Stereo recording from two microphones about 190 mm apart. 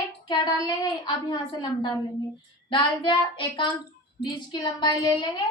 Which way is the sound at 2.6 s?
25° left (ahead or behind).